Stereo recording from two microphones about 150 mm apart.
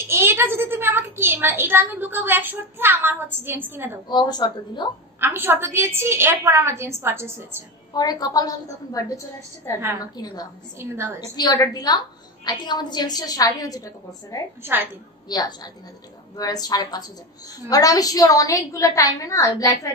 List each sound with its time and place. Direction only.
0.1 s a woman's voice: 15° right (ahead or behind)
4.1 s a woman's voice: 25° left (ahead or behind)
5.2 s a woman's voice: 15° right (ahead or behind)
7.9 s a woman's voice: 25° left (ahead or behind)
10.8 s a woman's voice: 15° right (ahead or behind)
11.3 s a woman's voice: 25° left (ahead or behind)
14.6 s a woman's voice: 15° right (ahead or behind)
15.2 s a woman's voice: 25° left (ahead or behind)